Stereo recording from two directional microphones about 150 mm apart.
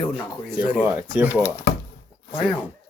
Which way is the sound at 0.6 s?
10° right (ahead or behind).